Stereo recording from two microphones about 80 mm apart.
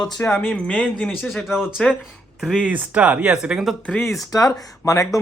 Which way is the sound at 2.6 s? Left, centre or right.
Centre.